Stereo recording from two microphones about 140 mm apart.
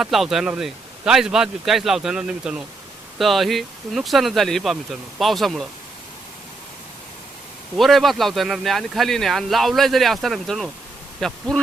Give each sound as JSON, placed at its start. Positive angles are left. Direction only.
{"t": 0.0, "sound": "speech", "side_deg": 0}
{"t": 7.8, "sound": "speech", "side_deg": 0}